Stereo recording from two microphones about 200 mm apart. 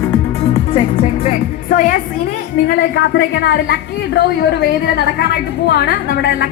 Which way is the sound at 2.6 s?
55° left (ahead or behind).